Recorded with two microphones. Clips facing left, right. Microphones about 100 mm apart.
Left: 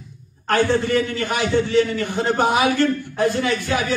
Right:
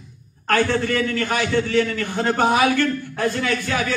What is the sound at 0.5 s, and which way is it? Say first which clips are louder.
A man's voice: left 1 dB; 15° left (ahead or behind).